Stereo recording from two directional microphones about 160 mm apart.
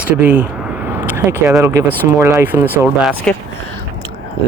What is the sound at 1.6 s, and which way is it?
Speech, 20° right (ahead or behind).